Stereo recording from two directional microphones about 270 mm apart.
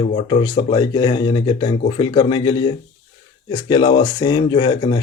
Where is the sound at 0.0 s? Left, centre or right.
Left.